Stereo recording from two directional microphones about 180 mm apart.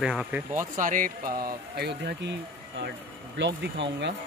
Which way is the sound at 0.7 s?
45° right (ahead or behind).